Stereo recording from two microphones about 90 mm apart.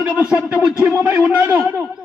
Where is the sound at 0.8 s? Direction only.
25° right (ahead or behind).